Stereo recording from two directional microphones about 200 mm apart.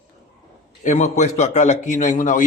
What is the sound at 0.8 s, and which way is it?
A man's voice, 35° left (ahead or behind).